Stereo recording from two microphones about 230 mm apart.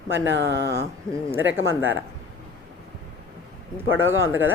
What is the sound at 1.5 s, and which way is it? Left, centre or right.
Speech, right.